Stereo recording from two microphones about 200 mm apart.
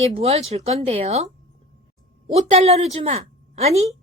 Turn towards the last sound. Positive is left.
turn(degrees=-30)  # may be behind; listen again after turning